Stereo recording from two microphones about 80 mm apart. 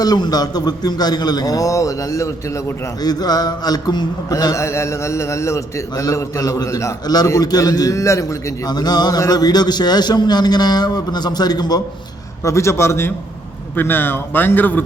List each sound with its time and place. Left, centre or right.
0.0 s a man's voice: left
3.0 s a man's voice: left
4.6 s a man's voice: left
8.7 s a man's voice: left
12.4 s a man's voice: left